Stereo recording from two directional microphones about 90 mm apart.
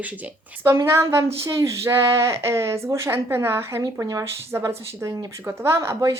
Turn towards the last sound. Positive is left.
turn(degrees=-30)  # may be behind; listen again after turning